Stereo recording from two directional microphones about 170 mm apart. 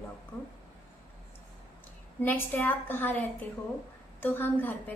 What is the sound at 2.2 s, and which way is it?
A woman's voice, 10° left (ahead or behind).